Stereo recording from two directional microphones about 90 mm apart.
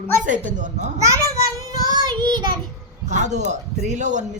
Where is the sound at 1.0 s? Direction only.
35° right (ahead or behind); by 2.6 s 55° right (ahead or behind).